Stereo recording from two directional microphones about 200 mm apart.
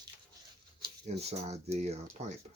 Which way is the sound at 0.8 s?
30° right (ahead or behind).